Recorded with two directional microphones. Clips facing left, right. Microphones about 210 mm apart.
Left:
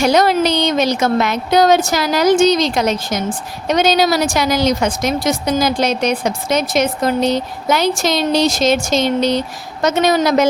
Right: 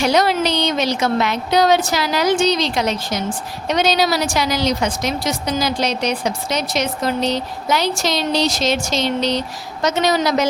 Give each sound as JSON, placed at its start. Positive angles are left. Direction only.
{"t": 0.0, "sound": "a woman's voice", "side_deg": 45}